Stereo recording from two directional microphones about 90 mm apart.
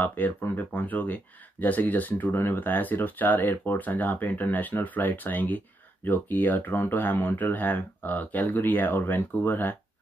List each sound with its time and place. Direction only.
0.0 s speech: 20° left (ahead or behind)